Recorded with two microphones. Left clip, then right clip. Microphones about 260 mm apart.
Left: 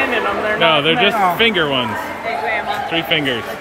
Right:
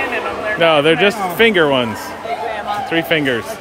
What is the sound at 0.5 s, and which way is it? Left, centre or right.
Speech, centre.